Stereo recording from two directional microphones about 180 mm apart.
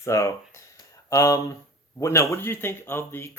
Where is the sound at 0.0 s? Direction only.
15° left (ahead or behind).